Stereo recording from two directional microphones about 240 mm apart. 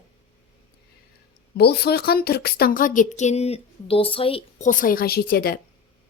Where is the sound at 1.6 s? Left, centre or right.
Left.